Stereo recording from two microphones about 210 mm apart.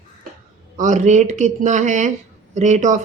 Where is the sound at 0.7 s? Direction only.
35° right (ahead or behind).